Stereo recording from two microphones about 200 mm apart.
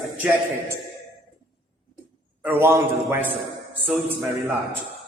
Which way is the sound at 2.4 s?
10° right (ahead or behind).